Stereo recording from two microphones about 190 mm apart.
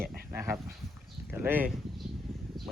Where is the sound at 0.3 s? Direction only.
10° right (ahead or behind).